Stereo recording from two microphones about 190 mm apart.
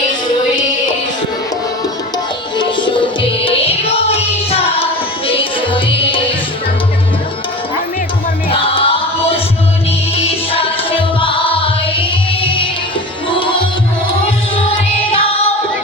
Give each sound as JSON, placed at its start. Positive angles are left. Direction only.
{"t": 2.6, "sound": "music", "side_deg": 25}
{"t": 8.4, "sound": "music", "side_deg": 30}